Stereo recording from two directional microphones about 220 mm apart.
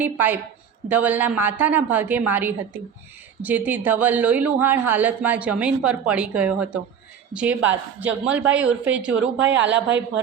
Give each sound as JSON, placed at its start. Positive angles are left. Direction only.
{"t": 0.0, "sound": "speech", "side_deg": -10}
{"t": 9.2, "sound": "speech", "side_deg": -55}